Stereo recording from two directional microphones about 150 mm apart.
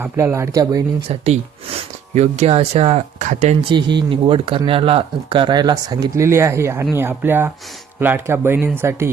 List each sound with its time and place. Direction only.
0.0 s speech: 15° right (ahead or behind)
1.0 s speech: 45° right (ahead or behind)
3.7 s speech: 30° right (ahead or behind); by 9.0 s 15° right (ahead or behind)